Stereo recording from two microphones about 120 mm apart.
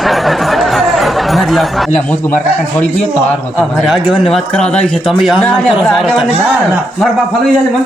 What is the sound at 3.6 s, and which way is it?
Music, centre (ahead or behind).